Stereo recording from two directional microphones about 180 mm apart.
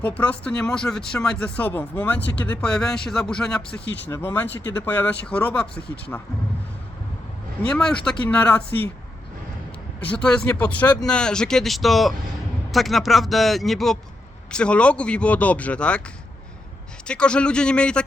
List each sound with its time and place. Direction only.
0.0 s speech: 5° left (ahead or behind)
3.8 s speech: 75° left (ahead or behind)
4.1 s speech: 10° left (ahead or behind)
7.7 s speech: 5° left (ahead or behind)
10.0 s speech: 5° left (ahead or behind)
17.1 s speech: 5° left (ahead or behind)